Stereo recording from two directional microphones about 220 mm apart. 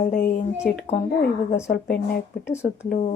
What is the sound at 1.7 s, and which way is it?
Speech, 45° left (ahead or behind).